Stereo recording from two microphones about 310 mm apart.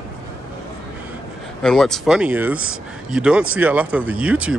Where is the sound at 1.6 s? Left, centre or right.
Centre.